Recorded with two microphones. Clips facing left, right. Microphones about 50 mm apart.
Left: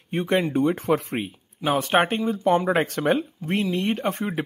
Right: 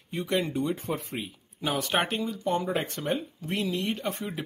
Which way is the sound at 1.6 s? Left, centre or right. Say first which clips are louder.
Left 7 dB; left.